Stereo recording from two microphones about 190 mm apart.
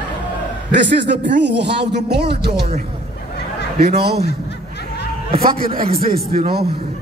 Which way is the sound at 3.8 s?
55° right (ahead or behind).